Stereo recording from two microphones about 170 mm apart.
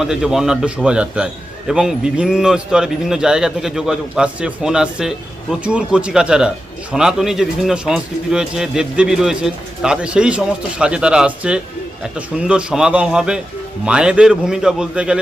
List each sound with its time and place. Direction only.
0.0 s a man's voice: 5° right (ahead or behind)